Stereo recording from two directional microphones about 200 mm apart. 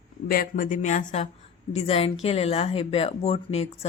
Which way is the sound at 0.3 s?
45° left (ahead or behind).